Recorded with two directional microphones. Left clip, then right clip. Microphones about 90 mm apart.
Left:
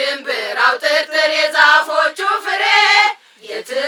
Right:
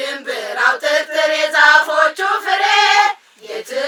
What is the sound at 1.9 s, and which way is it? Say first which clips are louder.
Choir: right 1 dB; 5° left (ahead or behind).